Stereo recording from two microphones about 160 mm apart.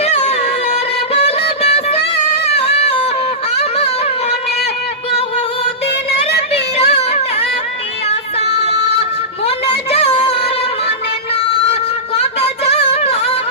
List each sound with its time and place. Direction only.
0.0 s music: 45° left (ahead or behind)
6.5 s music: 40° left (ahead or behind)
9.9 s music: 40° left (ahead or behind)
11.7 s music: 40° left (ahead or behind)